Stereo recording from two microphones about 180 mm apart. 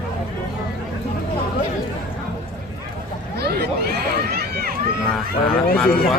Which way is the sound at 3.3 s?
60° right (ahead or behind).